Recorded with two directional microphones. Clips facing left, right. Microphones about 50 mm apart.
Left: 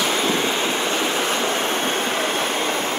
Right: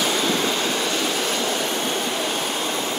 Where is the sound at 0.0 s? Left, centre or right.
Left.